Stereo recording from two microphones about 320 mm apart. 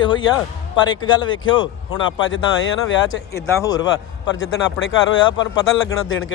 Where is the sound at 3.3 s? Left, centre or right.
Centre.